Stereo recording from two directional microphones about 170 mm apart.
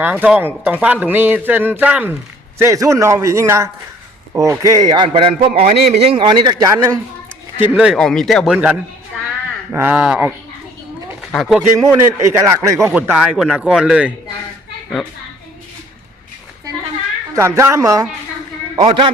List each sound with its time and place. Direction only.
0.0 s a man's voice: 10° right (ahead or behind)
7.6 s a man's voice: 10° right (ahead or behind)
11.9 s a man's voice: 15° right (ahead or behind)
12.9 s a man's voice: 10° right (ahead or behind)
17.3 s a man's voice: 15° right (ahead or behind)
18.8 s a man's voice: 30° right (ahead or behind)